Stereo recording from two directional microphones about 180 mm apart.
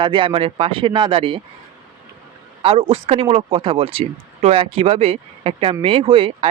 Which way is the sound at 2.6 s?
30° right (ahead or behind).